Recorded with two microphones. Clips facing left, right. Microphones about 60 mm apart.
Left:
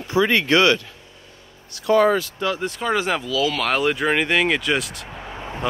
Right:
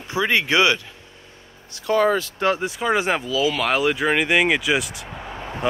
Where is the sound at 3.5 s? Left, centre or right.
Centre.